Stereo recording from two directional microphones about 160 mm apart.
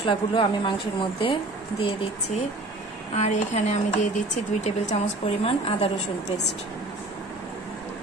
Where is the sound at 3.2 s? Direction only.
45° left (ahead or behind).